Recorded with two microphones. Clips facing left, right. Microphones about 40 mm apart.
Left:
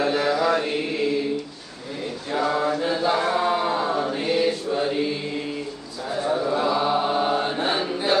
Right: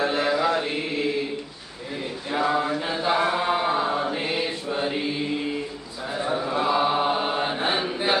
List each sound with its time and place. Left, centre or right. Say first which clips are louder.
0.1 s mantra: left 1 dB; centre
2.3 s chant: left 1 dB; centre